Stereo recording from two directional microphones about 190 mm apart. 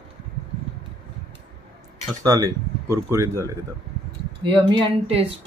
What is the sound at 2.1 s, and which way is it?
Speech, 15° right (ahead or behind).